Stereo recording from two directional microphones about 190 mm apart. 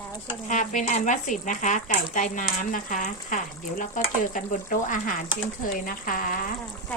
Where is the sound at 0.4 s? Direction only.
40° left (ahead or behind).